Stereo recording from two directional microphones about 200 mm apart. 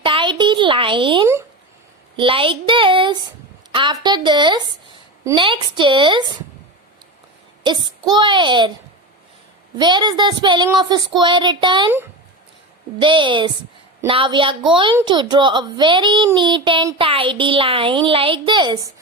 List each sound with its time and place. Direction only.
0.0 s a sound: 25° right (ahead or behind)
2.1 s a woman's voice: 25° right (ahead or behind)
7.6 s a child's voice: 20° right (ahead or behind)
9.7 s a child's voice: 20° right (ahead or behind)
13.0 s a child's voice: 25° right (ahead or behind)